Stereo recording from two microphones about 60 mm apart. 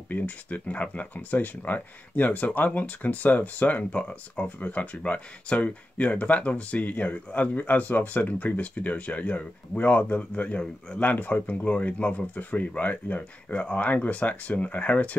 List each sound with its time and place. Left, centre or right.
0.1 s speech: left